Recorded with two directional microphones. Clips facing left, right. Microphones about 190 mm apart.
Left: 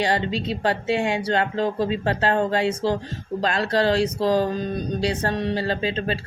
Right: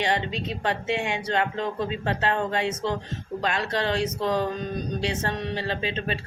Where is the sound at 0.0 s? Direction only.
35° left (ahead or behind).